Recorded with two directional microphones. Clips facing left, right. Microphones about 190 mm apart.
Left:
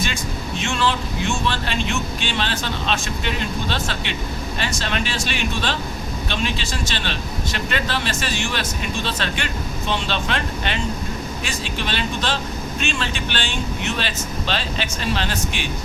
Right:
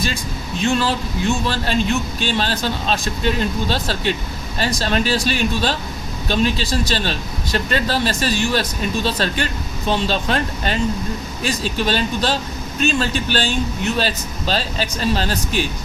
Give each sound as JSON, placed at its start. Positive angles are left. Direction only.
{"t": 0.6, "sound": "a man's voice", "side_deg": -40}